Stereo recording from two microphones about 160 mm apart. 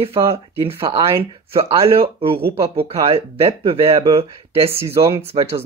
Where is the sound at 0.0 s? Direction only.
35° right (ahead or behind).